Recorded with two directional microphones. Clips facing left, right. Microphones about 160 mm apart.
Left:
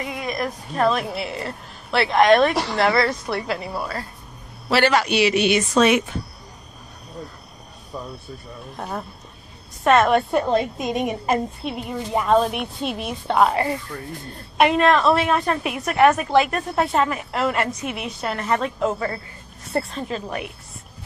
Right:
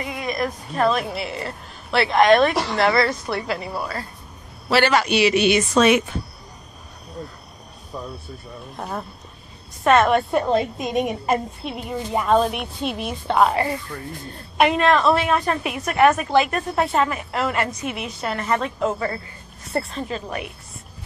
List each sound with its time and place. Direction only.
0.0 s a sound: centre (ahead or behind)
0.8 s a woman's voice: centre (ahead or behind)
8.7 s a woman's voice: centre (ahead or behind)
14.6 s a woman's voice: centre (ahead or behind)